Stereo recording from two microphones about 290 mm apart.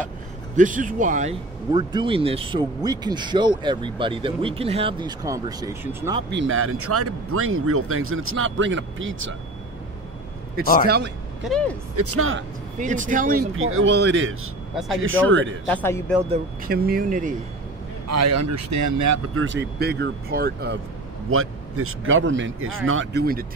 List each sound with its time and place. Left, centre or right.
0.6 s speech: right
1.7 s speech: centre
6.3 s speech: right
11.4 s speech: centre
11.9 s speech: right
12.7 s speech: right
13.6 s speech: right
15.7 s speech: centre
16.3 s speech: right
18.0 s speech: right
19.3 s speech: right
21.3 s speech: right